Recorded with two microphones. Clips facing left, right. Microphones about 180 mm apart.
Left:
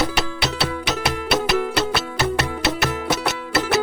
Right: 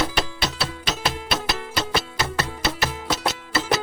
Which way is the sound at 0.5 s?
70° left (ahead or behind).